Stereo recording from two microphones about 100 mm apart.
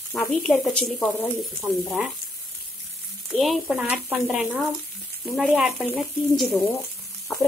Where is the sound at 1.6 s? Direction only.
5° right (ahead or behind).